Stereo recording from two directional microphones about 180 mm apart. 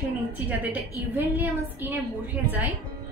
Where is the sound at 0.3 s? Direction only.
10° right (ahead or behind).